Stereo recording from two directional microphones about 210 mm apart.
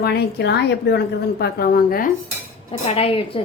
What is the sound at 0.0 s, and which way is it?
A woman's voice, 50° left (ahead or behind).